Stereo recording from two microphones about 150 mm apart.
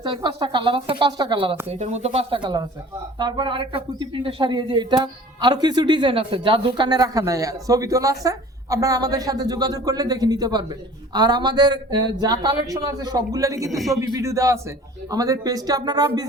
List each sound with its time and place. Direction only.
0.0 s speech: 30° right (ahead or behind)
1.6 s speech: 45° right (ahead or behind); by 13.7 s 20° right (ahead or behind)
13.7 s a man's voice: centre (ahead or behind)
14.0 s speech: 20° right (ahead or behind)